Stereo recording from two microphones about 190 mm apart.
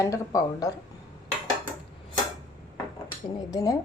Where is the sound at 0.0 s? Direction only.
15° left (ahead or behind).